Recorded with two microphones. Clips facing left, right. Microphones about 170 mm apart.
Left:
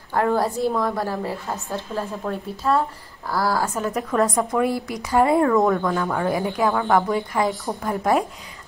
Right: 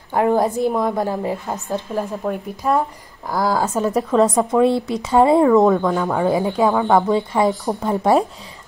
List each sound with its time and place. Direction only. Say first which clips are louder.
0.1 s a woman's voice: right 4 dB; 15° right (ahead or behind)